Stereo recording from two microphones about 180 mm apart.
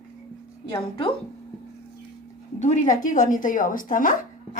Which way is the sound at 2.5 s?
40° left (ahead or behind).